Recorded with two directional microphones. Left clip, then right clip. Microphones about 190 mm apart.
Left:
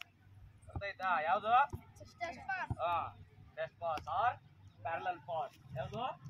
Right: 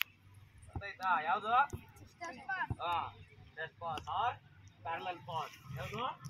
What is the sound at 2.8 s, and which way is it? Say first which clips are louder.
Speech: left 1 dB; 20° left (ahead or behind).